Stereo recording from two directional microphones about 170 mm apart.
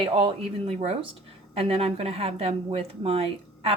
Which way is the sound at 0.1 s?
30° right (ahead or behind).